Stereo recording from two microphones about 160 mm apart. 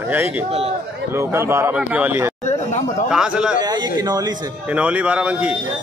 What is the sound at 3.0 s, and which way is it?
Speech, 5° right (ahead or behind).